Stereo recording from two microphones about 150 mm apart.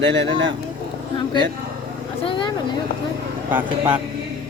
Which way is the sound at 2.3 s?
30° left (ahead or behind).